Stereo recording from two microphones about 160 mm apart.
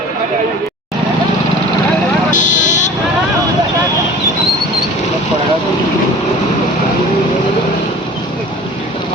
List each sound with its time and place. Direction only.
2.3 s vehicle: 50° left (ahead or behind)